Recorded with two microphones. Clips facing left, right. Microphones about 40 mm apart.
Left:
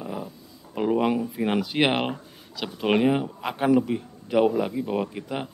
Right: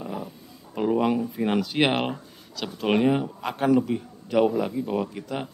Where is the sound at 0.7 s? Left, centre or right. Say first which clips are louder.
Even; centre.